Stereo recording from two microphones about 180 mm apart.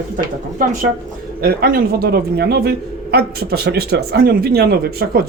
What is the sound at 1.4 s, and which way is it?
A man's voice, 55° right (ahead or behind).